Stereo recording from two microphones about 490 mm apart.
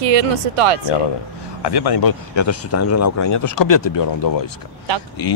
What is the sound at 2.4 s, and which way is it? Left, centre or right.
Speech, left.